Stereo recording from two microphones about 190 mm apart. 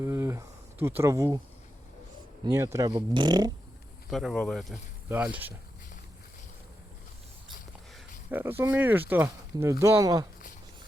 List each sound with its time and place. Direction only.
0.0 s speech: 15° right (ahead or behind)
2.4 s a man's voice: 15° right (ahead or behind)
4.1 s speech: centre (ahead or behind)
8.3 s speech: 10° right (ahead or behind)